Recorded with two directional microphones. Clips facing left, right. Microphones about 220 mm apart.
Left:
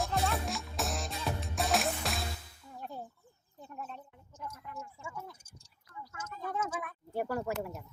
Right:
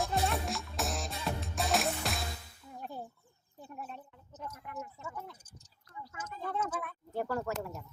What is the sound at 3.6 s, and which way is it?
Chicken, 10° right (ahead or behind).